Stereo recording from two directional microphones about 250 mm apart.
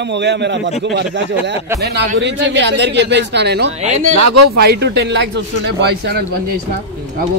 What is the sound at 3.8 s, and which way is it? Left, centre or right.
Speech, right.